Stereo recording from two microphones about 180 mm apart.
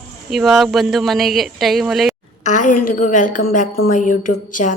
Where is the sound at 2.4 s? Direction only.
45° left (ahead or behind).